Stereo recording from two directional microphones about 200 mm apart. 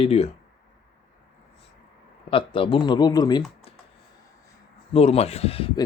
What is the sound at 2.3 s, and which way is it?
Speech, 25° left (ahead or behind).